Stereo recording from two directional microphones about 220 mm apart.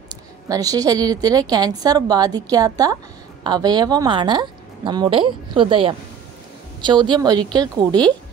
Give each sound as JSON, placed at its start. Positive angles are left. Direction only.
{"t": 0.5, "sound": "a woman's voice", "side_deg": -15}